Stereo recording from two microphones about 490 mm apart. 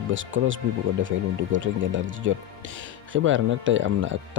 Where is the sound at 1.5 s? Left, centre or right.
Right.